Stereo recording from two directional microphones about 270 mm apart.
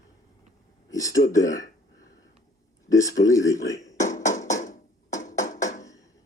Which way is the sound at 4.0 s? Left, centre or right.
Left.